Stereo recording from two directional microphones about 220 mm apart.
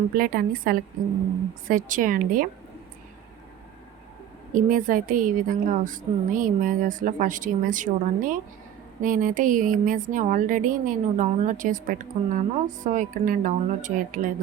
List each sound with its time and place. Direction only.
0.2 s a woman's voice: 40° right (ahead or behind)
4.5 s a woman's voice: 40° right (ahead or behind)